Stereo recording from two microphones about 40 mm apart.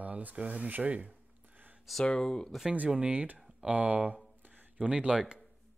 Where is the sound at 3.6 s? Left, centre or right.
Right.